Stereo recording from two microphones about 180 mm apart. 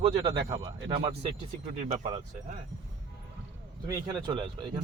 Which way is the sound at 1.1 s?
35° right (ahead or behind).